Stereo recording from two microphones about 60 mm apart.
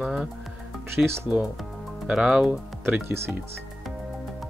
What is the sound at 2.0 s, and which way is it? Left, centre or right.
Speech, centre.